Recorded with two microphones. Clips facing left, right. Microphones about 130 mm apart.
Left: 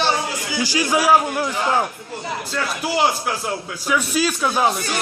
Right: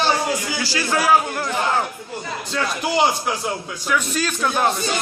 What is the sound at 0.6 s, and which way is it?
Speech, 15° left (ahead or behind).